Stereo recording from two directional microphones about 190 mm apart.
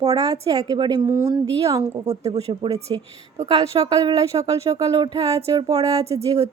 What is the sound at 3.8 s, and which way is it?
Speech, 20° right (ahead or behind).